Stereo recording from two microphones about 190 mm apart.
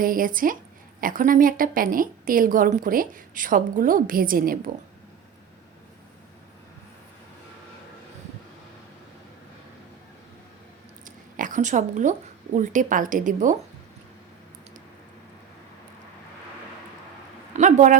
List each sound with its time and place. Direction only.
0.0 s a woman's voice: 45° right (ahead or behind)
11.0 s a sound: 45° right (ahead or behind)
12.5 s a woman's voice: 40° right (ahead or behind)
17.5 s speech: 40° right (ahead or behind)